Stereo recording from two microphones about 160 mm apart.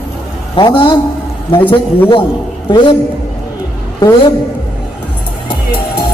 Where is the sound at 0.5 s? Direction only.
30° left (ahead or behind).